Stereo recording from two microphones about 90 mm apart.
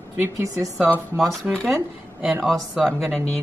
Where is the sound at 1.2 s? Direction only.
5° left (ahead or behind).